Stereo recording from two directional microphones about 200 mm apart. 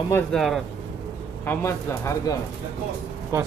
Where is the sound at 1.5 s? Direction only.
15° left (ahead or behind).